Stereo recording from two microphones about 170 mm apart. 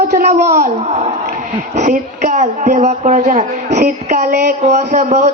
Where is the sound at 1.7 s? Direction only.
45° right (ahead or behind).